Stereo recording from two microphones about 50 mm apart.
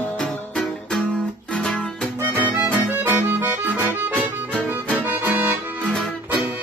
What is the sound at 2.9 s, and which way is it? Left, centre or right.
Accordion, right.